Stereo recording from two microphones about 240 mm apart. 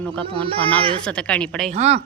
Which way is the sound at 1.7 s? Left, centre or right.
Right.